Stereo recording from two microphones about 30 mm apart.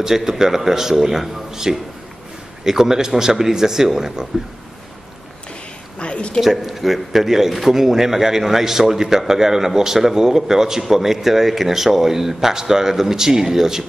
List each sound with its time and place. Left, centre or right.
0.0 s speech: centre
5.9 s a sound: left
6.4 s speech: centre